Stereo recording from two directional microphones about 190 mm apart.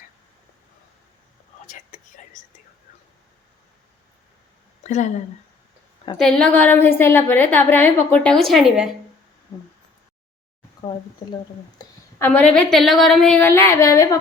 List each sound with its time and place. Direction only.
1.6 s whispering: 40° left (ahead or behind)
4.8 s speech: 40° left (ahead or behind)
6.1 s a woman's voice: 5° left (ahead or behind)
11.8 s a woman's voice: 10° left (ahead or behind)